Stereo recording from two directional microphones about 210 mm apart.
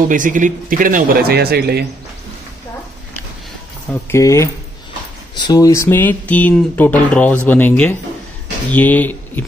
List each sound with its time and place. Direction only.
0.1 s a man's voice: 40° right (ahead or behind)
4.1 s speech: 15° left (ahead or behind)